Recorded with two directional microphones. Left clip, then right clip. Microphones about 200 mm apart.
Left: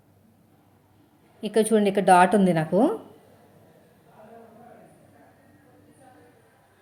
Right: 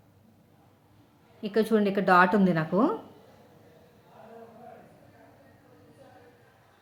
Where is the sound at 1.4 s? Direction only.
10° left (ahead or behind).